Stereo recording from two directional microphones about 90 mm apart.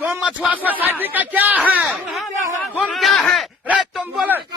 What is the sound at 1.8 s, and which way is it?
Speech, centre (ahead or behind).